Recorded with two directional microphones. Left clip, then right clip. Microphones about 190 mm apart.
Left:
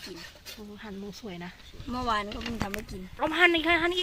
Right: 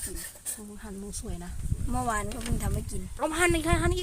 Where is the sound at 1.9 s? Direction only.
15° right (ahead or behind).